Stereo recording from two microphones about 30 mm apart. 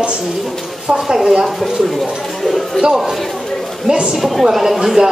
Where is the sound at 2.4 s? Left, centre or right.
Centre.